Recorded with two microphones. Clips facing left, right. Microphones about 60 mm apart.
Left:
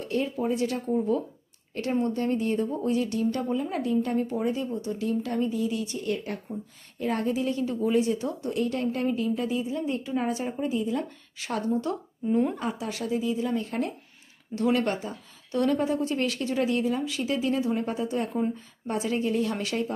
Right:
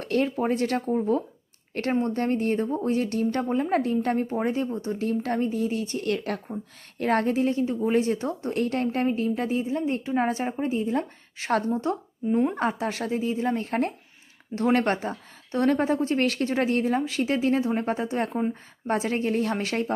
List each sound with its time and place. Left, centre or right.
0.0 s a sound: right
0.3 s speech: right
0.9 s a woman's voice: right
1.7 s a woman's voice: right
6.1 s speech: right
7.0 s a woman's voice: right
7.9 s a woman's voice: right
12.5 s a woman's voice: right